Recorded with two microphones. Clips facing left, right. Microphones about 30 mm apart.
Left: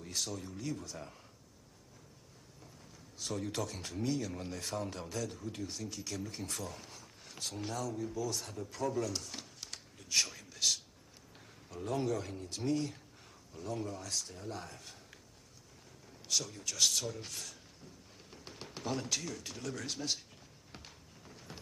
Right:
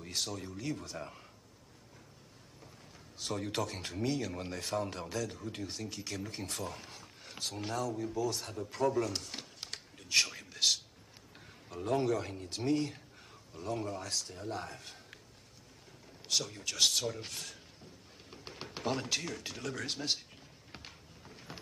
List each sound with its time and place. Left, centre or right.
0.0 s a man's voice: centre
3.2 s a man's voice: centre
16.3 s speech: right
20.7 s a sound: right